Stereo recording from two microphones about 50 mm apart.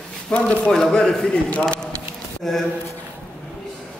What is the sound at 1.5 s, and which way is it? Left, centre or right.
Speech, left.